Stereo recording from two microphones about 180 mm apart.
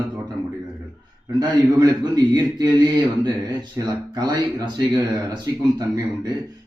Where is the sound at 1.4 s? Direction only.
20° right (ahead or behind).